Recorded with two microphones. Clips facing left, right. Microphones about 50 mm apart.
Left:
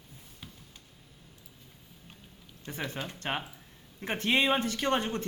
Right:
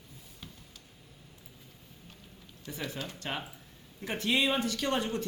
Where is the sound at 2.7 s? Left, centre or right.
Left.